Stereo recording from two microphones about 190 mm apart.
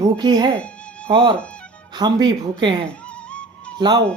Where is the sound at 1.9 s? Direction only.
20° right (ahead or behind).